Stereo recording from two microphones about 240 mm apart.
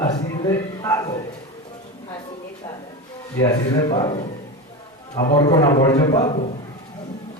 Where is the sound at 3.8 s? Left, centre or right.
Left.